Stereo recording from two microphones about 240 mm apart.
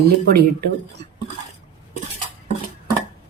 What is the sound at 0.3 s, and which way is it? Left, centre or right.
Dishes, right.